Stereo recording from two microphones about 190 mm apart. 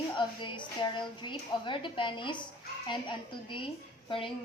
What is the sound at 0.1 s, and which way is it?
A woman's voice, 25° left (ahead or behind).